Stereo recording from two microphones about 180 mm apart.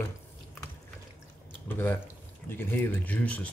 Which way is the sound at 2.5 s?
10° left (ahead or behind).